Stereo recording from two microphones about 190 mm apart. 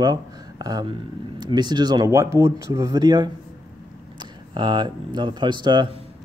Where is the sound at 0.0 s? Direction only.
20° right (ahead or behind).